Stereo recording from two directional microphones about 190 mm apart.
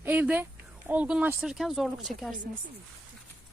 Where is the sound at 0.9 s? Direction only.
5° right (ahead or behind).